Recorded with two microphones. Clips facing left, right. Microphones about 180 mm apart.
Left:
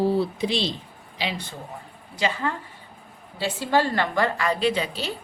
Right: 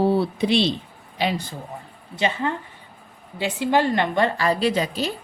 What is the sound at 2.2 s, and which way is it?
A woman's voice, 25° right (ahead or behind).